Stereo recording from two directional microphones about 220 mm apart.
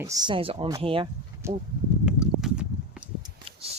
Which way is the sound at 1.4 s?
10° right (ahead or behind).